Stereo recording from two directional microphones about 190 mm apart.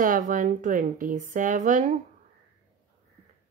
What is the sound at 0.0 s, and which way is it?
Speech, 45° right (ahead or behind).